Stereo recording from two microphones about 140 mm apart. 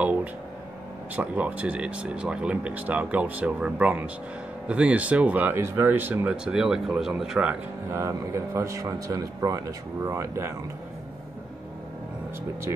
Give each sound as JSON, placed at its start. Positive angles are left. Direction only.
{"t": 0.0, "sound": "a sound", "side_deg": -10}
{"t": 1.1, "sound": "speech", "side_deg": -10}
{"t": 7.9, "sound": "a man's voice", "side_deg": -20}